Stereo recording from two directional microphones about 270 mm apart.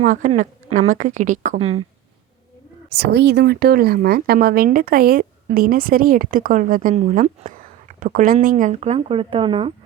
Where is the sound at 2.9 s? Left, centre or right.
Right; by 9.7 s centre.